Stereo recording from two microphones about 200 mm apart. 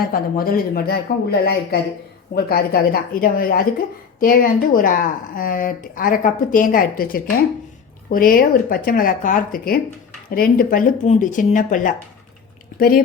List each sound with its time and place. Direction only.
0.0 s speech: 45° left (ahead or behind)